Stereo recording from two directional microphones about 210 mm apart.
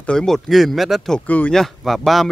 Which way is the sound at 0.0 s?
5° left (ahead or behind).